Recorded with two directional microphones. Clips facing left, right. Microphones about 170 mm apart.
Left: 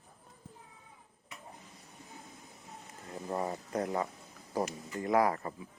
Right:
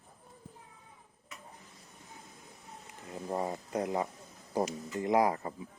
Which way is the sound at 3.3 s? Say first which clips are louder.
Right 1 dB; 20° right (ahead or behind).